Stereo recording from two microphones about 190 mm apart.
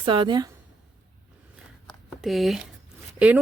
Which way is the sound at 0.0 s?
25° right (ahead or behind).